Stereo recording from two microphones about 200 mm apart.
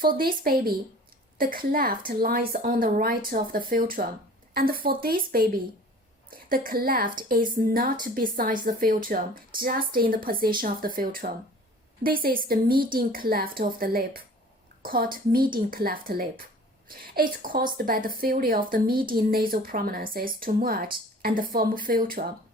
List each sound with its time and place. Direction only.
0.0 s speech: 45° right (ahead or behind)
6.5 s a woman's voice: 45° right (ahead or behind)